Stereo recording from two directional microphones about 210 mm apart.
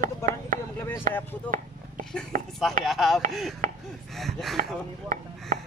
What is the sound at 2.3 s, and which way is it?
Speech, 45° right (ahead or behind).